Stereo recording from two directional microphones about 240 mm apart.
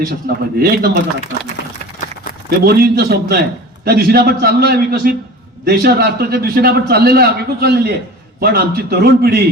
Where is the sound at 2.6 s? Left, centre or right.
Right.